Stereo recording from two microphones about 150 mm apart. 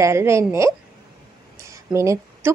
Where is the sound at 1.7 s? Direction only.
20° right (ahead or behind).